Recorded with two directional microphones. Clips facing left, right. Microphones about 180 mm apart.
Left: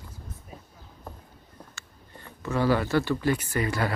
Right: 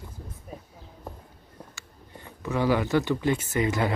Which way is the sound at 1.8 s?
15° right (ahead or behind).